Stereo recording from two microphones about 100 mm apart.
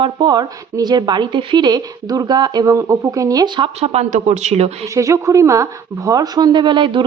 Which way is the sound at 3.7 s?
90° right.